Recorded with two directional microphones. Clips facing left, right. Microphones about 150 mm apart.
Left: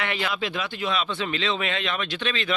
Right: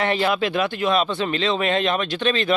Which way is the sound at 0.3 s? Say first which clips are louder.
Right 8 dB; 55° right (ahead or behind).